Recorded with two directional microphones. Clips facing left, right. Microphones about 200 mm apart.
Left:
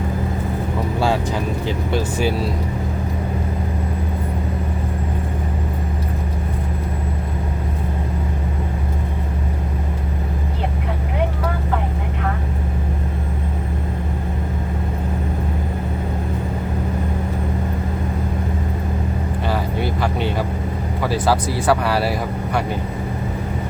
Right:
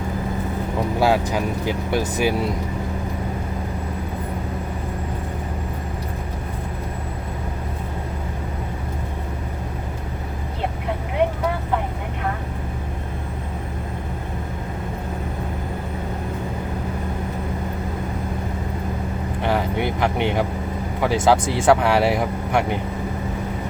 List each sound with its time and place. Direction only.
0.9 s speech: 10° right (ahead or behind)
19.5 s vehicle: 20° right (ahead or behind)
21.0 s speech: 20° right (ahead or behind)